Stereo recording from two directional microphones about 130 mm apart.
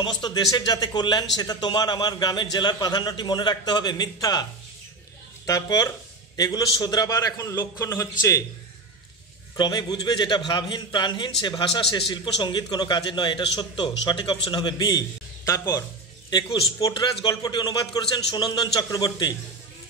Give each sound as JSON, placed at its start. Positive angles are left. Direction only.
{"t": 0.0, "sound": "speech", "side_deg": 35}
{"t": 5.5, "sound": "speech", "side_deg": 30}
{"t": 9.6, "sound": "speech", "side_deg": 35}
{"t": 16.3, "sound": "speech", "side_deg": 35}